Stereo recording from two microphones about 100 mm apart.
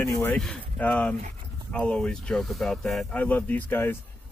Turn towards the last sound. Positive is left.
turn(degrees=20)  # may be behind; listen again after turning